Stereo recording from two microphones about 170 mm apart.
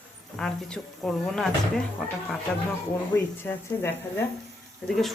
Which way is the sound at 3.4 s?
10° left (ahead or behind).